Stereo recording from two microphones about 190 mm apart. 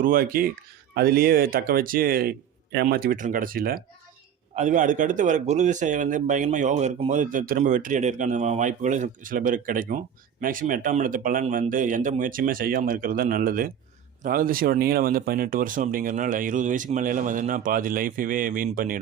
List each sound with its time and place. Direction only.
0.0 s speech: 50° right (ahead or behind)
4.5 s speech: 40° right (ahead or behind)